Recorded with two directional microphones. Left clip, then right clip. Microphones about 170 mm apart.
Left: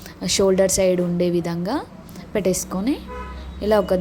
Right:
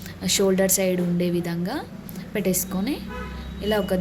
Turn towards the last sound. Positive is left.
turn(degrees=30)  # may be behind; listen again after turning